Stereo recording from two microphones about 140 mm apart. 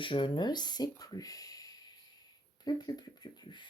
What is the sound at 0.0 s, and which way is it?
Speech, 35° left (ahead or behind).